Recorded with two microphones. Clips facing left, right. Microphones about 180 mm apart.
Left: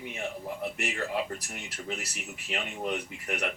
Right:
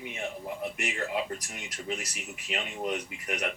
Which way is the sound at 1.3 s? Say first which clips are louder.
Even; 15° right (ahead or behind).